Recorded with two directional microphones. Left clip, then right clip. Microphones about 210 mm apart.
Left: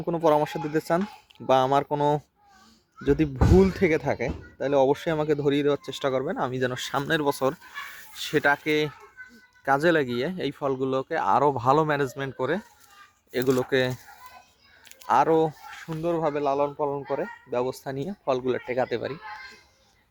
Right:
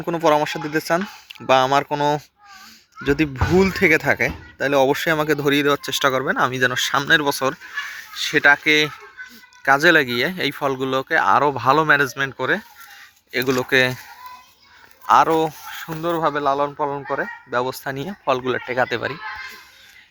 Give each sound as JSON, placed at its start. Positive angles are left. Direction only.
{"t": 0.1, "sound": "speech", "side_deg": 10}
{"t": 15.0, "sound": "speech", "side_deg": 15}
{"t": 19.2, "sound": "a sound", "side_deg": 55}